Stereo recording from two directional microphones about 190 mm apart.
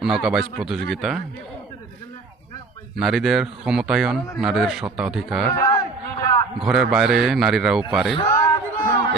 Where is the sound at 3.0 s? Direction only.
Centre (ahead or behind).